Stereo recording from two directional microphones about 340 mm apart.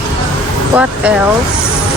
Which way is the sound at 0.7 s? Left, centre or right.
Centre.